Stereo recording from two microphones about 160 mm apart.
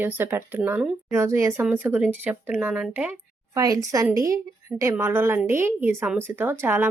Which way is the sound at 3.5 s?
20° right (ahead or behind).